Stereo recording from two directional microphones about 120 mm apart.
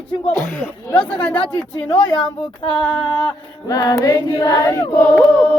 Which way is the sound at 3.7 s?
30° left (ahead or behind).